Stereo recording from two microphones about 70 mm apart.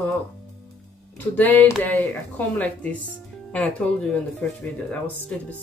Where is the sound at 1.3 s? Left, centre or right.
Left.